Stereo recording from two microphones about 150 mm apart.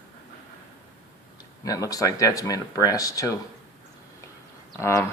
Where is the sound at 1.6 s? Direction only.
25° left (ahead or behind).